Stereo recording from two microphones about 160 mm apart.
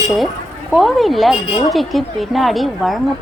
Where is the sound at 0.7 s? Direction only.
Centre (ahead or behind).